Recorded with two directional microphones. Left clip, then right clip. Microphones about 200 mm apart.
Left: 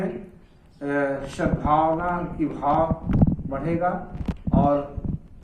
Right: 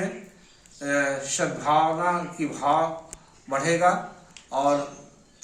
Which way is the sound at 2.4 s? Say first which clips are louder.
Left 3 dB; 15° right (ahead or behind).